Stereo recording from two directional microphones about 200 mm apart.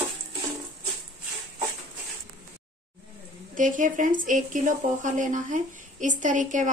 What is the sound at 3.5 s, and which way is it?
A woman's voice, 40° right (ahead or behind).